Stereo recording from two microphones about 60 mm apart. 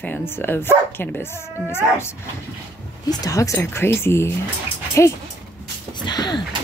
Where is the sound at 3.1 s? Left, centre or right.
Left.